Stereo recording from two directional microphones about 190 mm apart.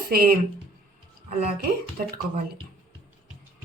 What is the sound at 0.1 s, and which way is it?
Speech, 50° right (ahead or behind).